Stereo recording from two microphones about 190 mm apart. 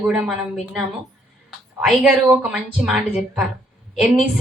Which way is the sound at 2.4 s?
5° right (ahead or behind).